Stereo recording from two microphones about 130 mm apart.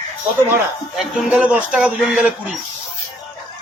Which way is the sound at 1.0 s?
5° right (ahead or behind).